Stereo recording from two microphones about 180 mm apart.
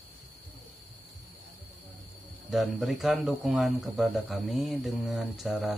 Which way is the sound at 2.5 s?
Centre (ahead or behind).